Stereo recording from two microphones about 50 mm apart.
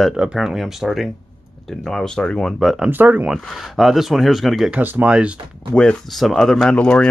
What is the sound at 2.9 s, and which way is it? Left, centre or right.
Speech, right.